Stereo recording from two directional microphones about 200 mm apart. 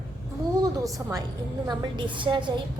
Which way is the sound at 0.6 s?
15° right (ahead or behind).